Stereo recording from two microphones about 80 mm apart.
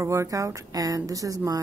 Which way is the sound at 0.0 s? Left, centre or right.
Right.